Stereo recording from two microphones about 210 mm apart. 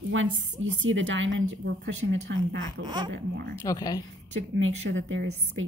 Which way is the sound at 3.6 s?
15° left (ahead or behind).